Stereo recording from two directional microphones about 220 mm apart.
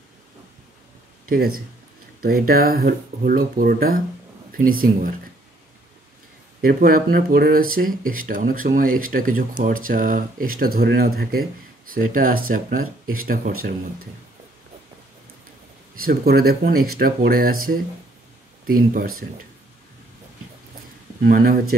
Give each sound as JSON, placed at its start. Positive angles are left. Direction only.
{"t": 1.3, "sound": "speech", "side_deg": -40}
{"t": 6.6, "sound": "speech", "side_deg": -40}
{"t": 16.0, "sound": "speech", "side_deg": -45}
{"t": 21.2, "sound": "speech", "side_deg": -40}